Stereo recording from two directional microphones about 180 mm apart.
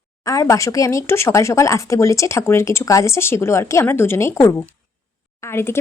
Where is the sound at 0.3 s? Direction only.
15° left (ahead or behind).